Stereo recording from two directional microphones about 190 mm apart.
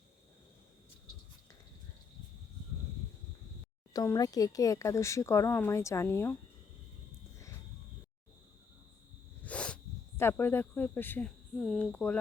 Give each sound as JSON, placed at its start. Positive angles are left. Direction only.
{"t": 3.9, "sound": "speech", "side_deg": 20}
{"t": 9.4, "sound": "speech", "side_deg": 5}